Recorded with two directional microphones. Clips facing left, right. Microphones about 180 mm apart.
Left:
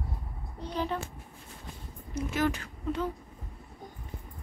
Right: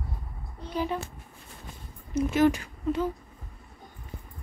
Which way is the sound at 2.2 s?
20° right (ahead or behind).